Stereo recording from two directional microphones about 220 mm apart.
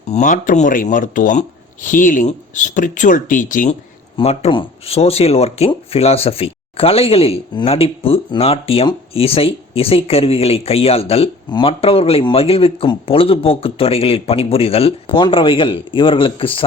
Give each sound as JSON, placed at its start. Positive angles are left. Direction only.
{"t": 0.1, "sound": "speech", "side_deg": 35}